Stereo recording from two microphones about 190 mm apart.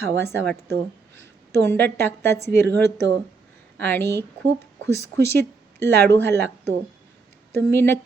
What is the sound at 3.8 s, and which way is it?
Speech, 10° left (ahead or behind).